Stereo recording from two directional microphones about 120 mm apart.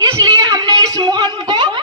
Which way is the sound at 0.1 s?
35° right (ahead or behind).